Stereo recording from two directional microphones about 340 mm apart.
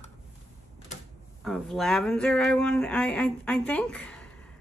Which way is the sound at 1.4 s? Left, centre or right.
Centre.